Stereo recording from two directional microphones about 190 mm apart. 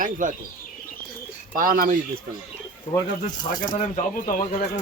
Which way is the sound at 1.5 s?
45° right (ahead or behind).